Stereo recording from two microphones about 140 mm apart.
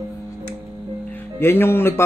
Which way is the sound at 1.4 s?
15° left (ahead or behind).